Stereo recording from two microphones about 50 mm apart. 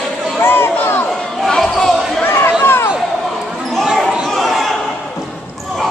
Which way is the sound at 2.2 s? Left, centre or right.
Left.